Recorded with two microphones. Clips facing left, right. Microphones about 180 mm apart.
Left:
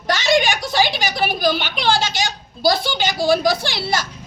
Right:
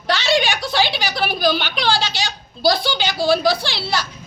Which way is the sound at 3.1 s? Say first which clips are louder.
Even; 15° left (ahead or behind).